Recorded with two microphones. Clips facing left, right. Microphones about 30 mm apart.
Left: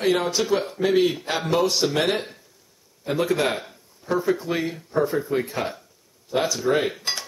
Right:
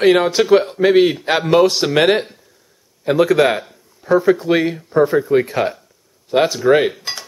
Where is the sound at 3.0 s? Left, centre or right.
Right.